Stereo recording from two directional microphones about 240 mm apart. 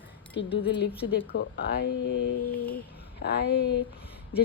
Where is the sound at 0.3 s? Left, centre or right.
Left.